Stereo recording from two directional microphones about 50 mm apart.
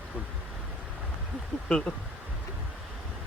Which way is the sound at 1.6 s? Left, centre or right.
Centre.